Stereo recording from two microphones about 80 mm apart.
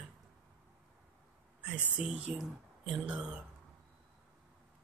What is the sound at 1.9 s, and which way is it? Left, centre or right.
Speech, centre.